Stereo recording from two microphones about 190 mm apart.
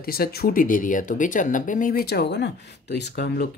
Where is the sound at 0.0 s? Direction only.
55° left (ahead or behind).